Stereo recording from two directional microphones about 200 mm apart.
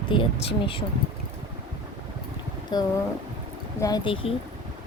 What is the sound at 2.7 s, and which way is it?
A woman's voice, 20° left (ahead or behind).